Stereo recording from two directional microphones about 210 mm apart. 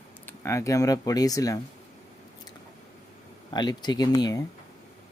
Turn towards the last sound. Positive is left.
turn(degrees=20)  # may be behind; listen again after turning